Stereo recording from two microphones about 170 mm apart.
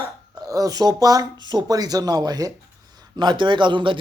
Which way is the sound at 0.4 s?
20° right (ahead or behind).